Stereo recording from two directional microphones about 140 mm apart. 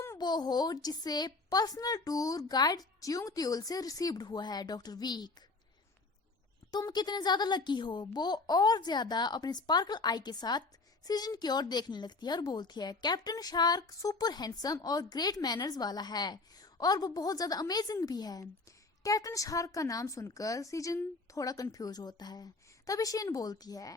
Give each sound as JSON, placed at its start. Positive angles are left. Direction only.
{"t": 0.0, "sound": "a woman's voice", "side_deg": 25}
{"t": 6.7, "sound": "a woman's voice", "side_deg": 30}